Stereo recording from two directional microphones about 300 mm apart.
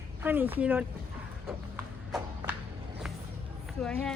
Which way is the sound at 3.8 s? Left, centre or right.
Centre.